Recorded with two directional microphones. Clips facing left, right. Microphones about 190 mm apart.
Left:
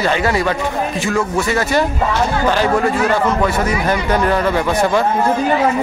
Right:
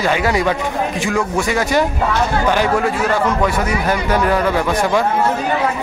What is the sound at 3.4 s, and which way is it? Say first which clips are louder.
A man's voice: left 1 dB; 5° right (ahead or behind).